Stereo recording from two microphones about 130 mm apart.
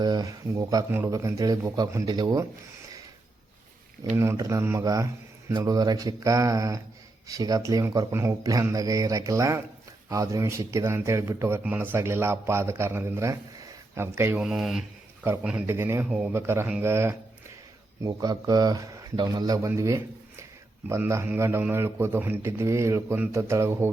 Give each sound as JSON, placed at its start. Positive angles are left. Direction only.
{"t": 0.0, "sound": "a man's voice", "side_deg": -30}
{"t": 4.1, "sound": "a man's voice", "side_deg": -20}
{"t": 14.4, "sound": "speech", "side_deg": -5}
{"t": 15.6, "sound": "a man's voice", "side_deg": -20}
{"t": 16.0, "sound": "a man's voice", "side_deg": -10}
{"t": 16.3, "sound": "a man's voice", "side_deg": -20}
{"t": 18.0, "sound": "a man's voice", "side_deg": -30}